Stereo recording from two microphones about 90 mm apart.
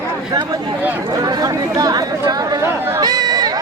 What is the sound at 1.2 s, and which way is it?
Speech, 45° right (ahead or behind).